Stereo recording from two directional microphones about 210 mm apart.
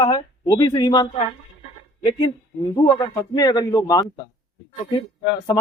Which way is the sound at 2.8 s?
15° left (ahead or behind).